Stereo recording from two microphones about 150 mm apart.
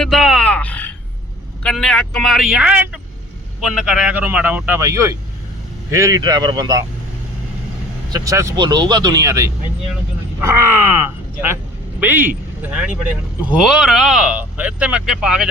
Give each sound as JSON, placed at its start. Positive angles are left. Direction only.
{"t": 0.0, "sound": "grunt", "side_deg": 0}
{"t": 1.6, "sound": "speech", "side_deg": 5}
{"t": 4.8, "sound": "speech", "side_deg": -20}
{"t": 8.1, "sound": "speech", "side_deg": -20}
{"t": 11.9, "sound": "speech", "side_deg": -15}